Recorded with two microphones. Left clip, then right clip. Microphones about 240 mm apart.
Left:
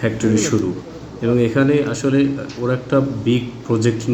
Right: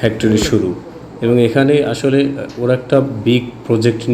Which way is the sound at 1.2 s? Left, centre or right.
Centre.